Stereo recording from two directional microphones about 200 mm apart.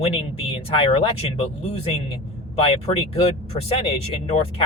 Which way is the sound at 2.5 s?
30° left (ahead or behind).